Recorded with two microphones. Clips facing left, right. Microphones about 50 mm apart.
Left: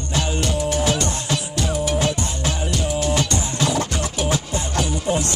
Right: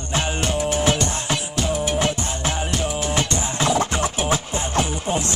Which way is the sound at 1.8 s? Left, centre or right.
Right.